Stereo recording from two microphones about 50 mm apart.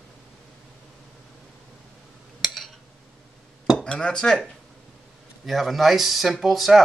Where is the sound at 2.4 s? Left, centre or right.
Centre.